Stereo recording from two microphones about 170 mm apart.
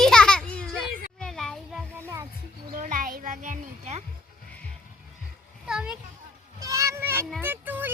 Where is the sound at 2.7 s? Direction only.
50° right (ahead or behind).